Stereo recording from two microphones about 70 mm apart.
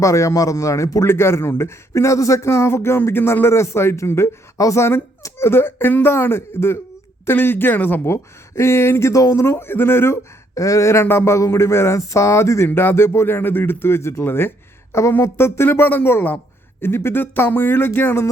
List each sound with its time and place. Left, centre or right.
0.0 s speech: left
1.0 s speech: left
10.5 s speech: left